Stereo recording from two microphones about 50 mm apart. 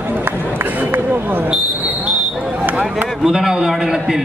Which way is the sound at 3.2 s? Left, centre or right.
Centre.